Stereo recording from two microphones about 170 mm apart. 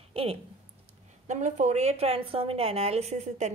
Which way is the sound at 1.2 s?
45° right (ahead or behind).